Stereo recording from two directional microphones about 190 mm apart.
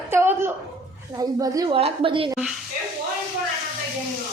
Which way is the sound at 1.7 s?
30° right (ahead or behind).